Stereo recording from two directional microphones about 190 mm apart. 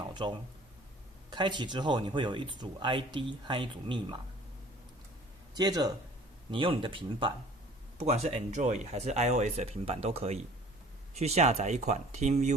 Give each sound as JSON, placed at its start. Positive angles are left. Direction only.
{"t": 0.1, "sound": "speech", "side_deg": -25}
{"t": 5.5, "sound": "speech", "side_deg": -20}